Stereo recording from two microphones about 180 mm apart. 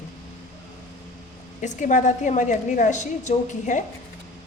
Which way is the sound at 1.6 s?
45° left (ahead or behind).